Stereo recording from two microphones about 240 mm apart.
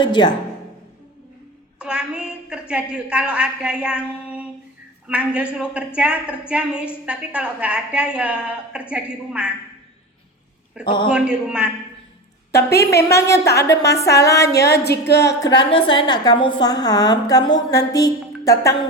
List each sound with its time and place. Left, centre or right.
0.0 s a woman's voice: centre
1.8 s a woman's voice: centre
10.8 s a man's voice: centre
11.1 s a woman's voice: centre
12.5 s a woman's voice: left
13.1 s a woman's voice: centre
14.6 s music: left
15.4 s a woman's voice: centre